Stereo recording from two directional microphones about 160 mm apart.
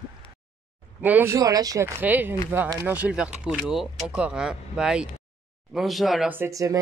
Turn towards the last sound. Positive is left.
turn(degrees=-20)  # may be behind; listen again after turning